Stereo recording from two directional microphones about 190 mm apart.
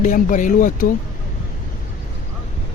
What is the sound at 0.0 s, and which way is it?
Speech, 40° left (ahead or behind).